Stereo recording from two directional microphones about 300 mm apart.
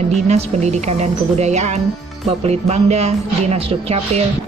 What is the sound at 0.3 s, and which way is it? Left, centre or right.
A woman's voice, right.